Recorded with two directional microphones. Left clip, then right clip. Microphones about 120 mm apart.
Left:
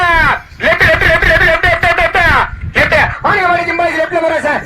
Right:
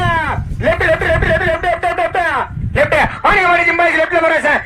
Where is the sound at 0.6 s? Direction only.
45° right (ahead or behind).